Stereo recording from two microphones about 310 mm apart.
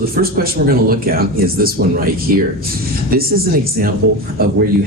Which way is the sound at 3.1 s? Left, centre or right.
Right.